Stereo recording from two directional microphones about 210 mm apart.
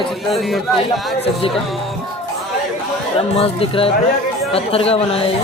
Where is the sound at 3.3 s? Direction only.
25° left (ahead or behind).